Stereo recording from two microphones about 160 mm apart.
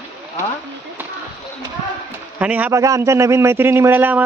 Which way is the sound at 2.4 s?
10° right (ahead or behind).